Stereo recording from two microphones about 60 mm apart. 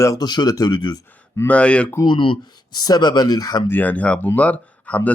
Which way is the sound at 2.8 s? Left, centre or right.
Left.